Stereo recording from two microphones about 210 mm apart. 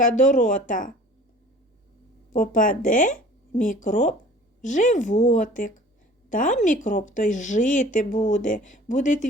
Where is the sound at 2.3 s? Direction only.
40° left (ahead or behind).